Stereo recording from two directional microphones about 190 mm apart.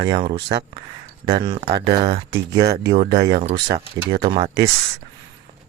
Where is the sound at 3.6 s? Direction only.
60° right (ahead or behind).